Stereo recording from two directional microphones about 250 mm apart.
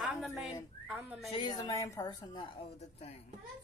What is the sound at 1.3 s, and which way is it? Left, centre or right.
A woman's voice, centre.